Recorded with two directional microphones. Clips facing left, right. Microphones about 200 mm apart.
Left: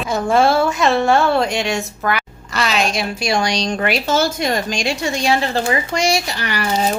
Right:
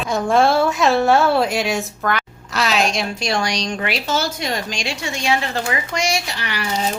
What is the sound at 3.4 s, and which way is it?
Speech, 30° left (ahead or behind).